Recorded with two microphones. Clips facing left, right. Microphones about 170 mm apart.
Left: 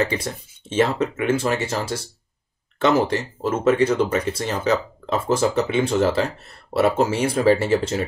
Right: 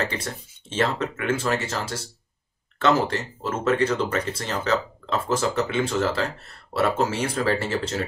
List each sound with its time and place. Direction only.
0.2 s speech: 10° left (ahead or behind)
2.8 s speech: 15° left (ahead or behind)